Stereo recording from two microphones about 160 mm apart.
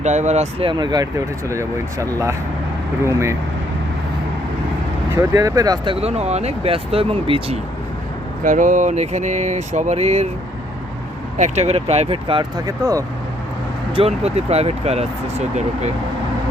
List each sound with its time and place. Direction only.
0.0 s speech: 45° right (ahead or behind)
0.7 s speech: 25° right (ahead or behind)
5.3 s speech: 20° right (ahead or behind)
8.4 s speech: 55° right (ahead or behind)
11.3 s speech: 45° right (ahead or behind)
12.6 s speech: 20° right (ahead or behind)
13.9 s speech: 40° right (ahead or behind)